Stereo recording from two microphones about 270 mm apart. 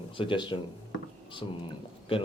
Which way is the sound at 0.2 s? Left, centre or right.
Centre.